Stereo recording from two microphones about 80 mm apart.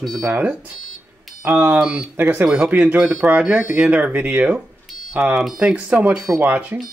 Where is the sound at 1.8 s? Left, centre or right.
Centre.